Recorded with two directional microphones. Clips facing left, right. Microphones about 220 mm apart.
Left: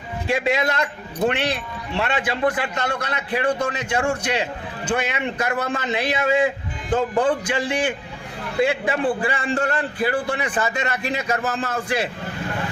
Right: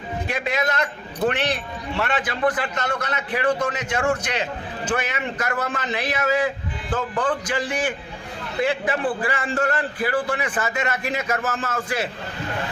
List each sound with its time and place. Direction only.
0.3 s a man's voice: 25° left (ahead or behind)
2.0 s a man's voice: 25° left (ahead or behind)